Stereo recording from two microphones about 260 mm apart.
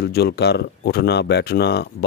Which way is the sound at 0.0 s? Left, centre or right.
Left.